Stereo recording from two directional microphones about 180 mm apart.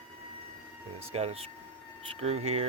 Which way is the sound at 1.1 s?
35° right (ahead or behind).